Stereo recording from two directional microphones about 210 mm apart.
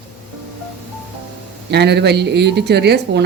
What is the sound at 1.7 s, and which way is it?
Speech, 55° right (ahead or behind).